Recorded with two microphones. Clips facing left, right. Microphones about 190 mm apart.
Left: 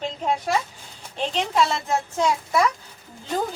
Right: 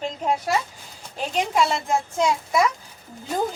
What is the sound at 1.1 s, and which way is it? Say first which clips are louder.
A woman's voice: even; 10° right (ahead or behind).